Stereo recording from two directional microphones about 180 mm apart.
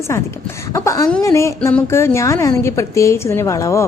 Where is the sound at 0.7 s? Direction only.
15° left (ahead or behind).